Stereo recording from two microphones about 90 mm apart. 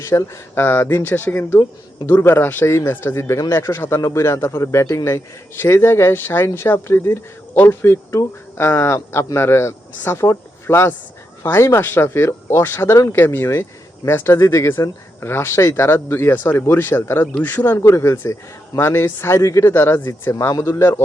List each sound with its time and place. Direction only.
0.0 s speech: 35° left (ahead or behind)